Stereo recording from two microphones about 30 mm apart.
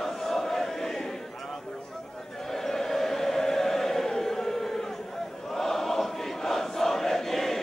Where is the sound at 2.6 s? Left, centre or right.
Centre.